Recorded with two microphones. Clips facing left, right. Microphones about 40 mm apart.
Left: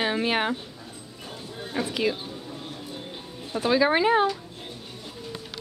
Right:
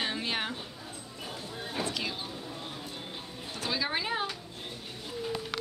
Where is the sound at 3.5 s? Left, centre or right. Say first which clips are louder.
Left 11 dB; centre.